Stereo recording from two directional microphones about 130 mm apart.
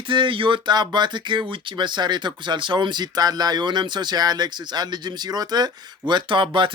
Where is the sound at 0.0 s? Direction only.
40° right (ahead or behind).